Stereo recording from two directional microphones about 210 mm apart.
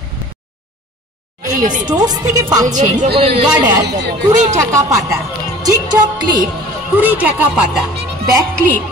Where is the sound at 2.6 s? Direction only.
35° right (ahead or behind).